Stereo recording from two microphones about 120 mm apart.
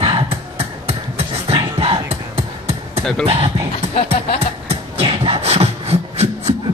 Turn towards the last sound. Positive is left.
turn(degrees=-55)  # may be behind; listen again after turning